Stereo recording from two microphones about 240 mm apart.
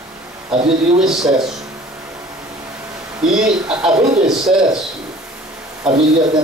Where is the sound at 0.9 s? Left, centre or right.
Centre.